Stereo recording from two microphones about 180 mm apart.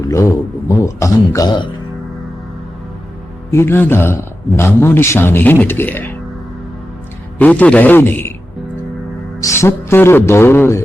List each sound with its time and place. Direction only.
0.1 s a man's voice: 15° left (ahead or behind)
3.5 s a man's voice: 15° left (ahead or behind)
7.3 s a man's voice: 10° left (ahead or behind)
9.4 s a man's voice: 15° left (ahead or behind)